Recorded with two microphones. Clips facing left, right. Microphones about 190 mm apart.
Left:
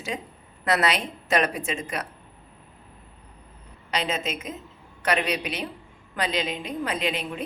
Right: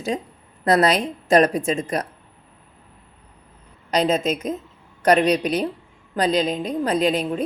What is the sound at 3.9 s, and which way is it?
A woman's voice, 40° right (ahead or behind).